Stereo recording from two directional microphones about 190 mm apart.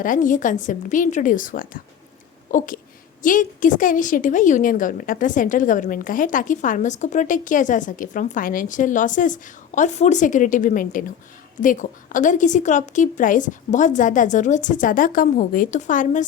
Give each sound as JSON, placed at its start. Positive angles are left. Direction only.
{"t": 0.0, "sound": "a woman's voice", "side_deg": 45}